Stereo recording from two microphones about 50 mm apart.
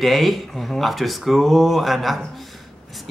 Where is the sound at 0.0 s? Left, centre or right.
Centre.